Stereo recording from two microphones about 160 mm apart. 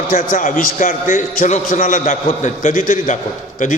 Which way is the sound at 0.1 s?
60° left (ahead or behind).